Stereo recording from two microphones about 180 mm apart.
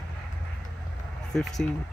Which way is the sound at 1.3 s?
Centre (ahead or behind).